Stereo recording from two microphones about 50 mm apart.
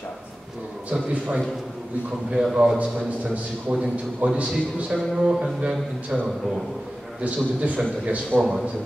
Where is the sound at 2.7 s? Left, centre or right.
Right.